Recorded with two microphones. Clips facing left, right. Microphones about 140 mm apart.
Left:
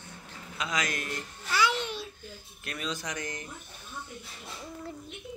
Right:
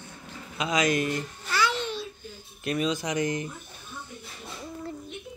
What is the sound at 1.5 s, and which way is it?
Babbling, 15° left (ahead or behind).